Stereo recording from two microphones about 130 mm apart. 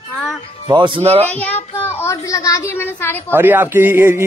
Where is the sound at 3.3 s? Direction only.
15° right (ahead or behind).